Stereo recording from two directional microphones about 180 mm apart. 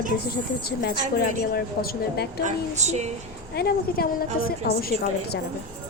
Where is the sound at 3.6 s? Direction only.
55° left (ahead or behind).